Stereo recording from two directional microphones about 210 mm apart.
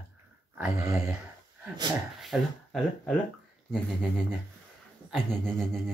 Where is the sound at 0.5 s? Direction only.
5° right (ahead or behind).